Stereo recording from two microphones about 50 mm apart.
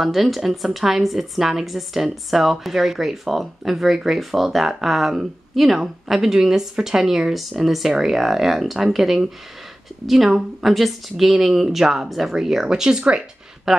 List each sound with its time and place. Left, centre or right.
0.0 s a woman's voice: centre